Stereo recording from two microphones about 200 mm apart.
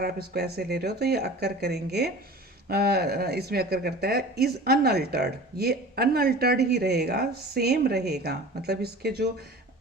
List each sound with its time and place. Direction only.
0.0 s speech: 50° right (ahead or behind)